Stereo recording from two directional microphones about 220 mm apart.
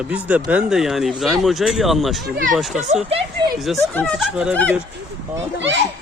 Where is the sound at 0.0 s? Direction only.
5° right (ahead or behind).